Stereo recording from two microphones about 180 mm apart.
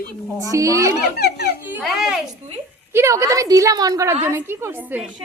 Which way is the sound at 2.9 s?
15° right (ahead or behind).